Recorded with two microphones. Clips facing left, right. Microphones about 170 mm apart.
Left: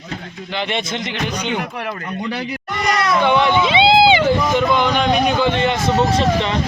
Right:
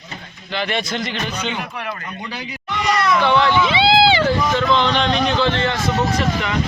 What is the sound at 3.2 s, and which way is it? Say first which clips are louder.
Vehicle: left 2 dB; 15° left (ahead or behind).